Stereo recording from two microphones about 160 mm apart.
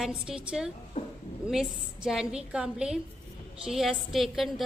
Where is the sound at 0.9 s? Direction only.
35° left (ahead or behind).